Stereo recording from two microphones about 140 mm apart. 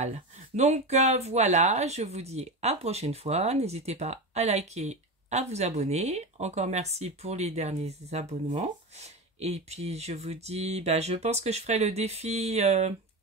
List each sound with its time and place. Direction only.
0.6 s speech: 55° right (ahead or behind)